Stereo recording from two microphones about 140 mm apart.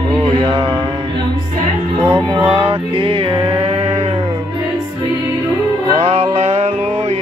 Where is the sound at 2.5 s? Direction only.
40° right (ahead or behind).